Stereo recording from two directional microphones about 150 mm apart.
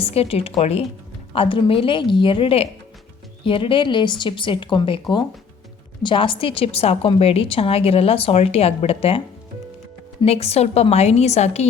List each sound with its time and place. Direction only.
0.0 s a woman's voice: 40° left (ahead or behind)
10.2 s a woman's voice: 40° left (ahead or behind)